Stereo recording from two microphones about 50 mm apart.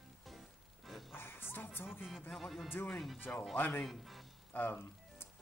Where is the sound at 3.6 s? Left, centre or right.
Left.